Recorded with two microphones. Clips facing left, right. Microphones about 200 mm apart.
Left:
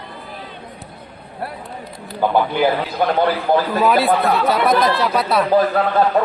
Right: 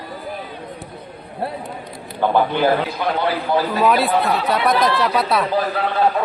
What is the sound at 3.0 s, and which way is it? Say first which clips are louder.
Speech: left 3 dB; 50° left (ahead or behind).